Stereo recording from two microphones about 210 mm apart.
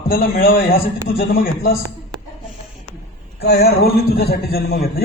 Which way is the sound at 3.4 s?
50° left (ahead or behind).